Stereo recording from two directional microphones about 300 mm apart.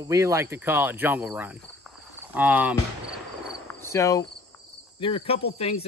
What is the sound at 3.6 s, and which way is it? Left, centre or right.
Cricket, centre.